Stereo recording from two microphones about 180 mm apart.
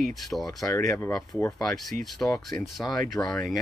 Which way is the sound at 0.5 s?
20° left (ahead or behind).